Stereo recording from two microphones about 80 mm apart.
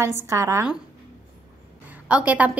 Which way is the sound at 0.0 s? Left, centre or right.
Right.